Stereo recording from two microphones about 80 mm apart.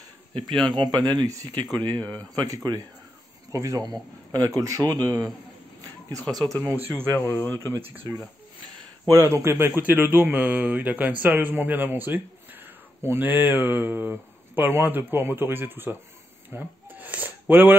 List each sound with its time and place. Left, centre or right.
0.4 s speech: centre
0.7 s speech: right
1.8 s speech: left
2.3 s speech: right
3.8 s speech: right
6.1 s speech: right
6.6 s a man's voice: right
7.5 s speech: left
7.8 s a man's voice: right
9.1 s a man's voice: right
16.4 s a sound: right